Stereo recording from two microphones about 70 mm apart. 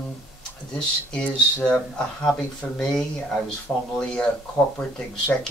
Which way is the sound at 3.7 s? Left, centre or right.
Left.